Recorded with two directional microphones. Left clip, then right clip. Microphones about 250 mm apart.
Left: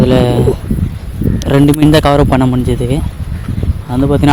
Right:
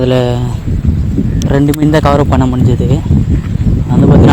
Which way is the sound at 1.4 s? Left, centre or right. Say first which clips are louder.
Left 3 dB; centre.